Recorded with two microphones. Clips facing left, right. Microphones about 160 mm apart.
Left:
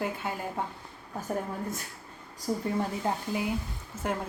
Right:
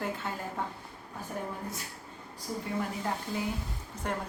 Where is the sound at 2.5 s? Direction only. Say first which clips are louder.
Left 6 dB; 45° left (ahead or behind).